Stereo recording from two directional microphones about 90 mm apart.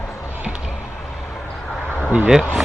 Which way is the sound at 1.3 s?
10° left (ahead or behind).